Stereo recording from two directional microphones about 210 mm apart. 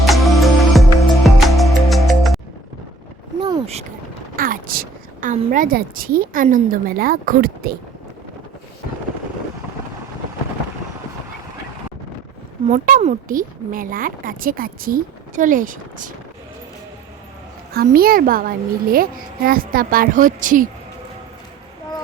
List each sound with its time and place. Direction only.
0.0 s music: centre (ahead or behind)
3.4 s a sound: 25° right (ahead or behind)
4.4 s a sound: 40° right (ahead or behind)
5.5 s a child's voice: 40° right (ahead or behind)
12.6 s speech: 40° right (ahead or behind)
17.7 s a child's voice: 45° right (ahead or behind)